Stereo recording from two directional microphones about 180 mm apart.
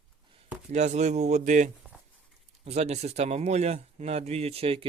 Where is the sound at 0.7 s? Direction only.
40° right (ahead or behind).